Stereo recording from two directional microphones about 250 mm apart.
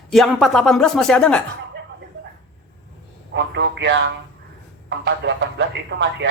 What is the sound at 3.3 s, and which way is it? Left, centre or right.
Speech, right.